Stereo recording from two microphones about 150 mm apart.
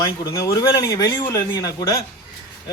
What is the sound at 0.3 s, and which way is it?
A man's voice, 20° left (ahead or behind).